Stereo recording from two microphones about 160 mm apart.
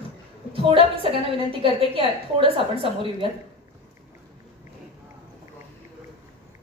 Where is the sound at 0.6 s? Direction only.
35° right (ahead or behind).